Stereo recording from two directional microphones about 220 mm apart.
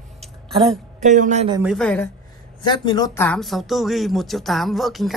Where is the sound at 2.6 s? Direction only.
20° left (ahead or behind).